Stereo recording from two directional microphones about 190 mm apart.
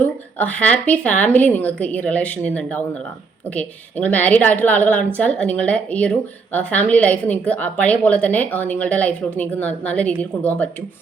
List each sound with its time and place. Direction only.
0.0 s a woman's voice: 10° left (ahead or behind)